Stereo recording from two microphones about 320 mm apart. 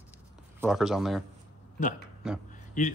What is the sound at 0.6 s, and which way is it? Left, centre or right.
Speech, centre.